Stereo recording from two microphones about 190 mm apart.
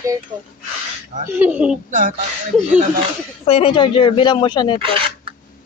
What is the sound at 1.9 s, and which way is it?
Music, 45° right (ahead or behind).